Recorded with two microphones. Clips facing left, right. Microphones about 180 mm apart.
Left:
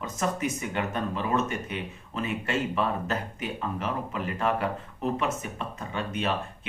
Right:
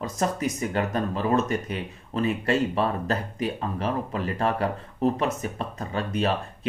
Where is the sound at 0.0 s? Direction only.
35° right (ahead or behind).